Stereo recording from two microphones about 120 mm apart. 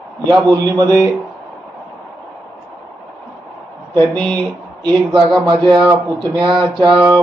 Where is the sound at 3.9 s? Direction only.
35° right (ahead or behind).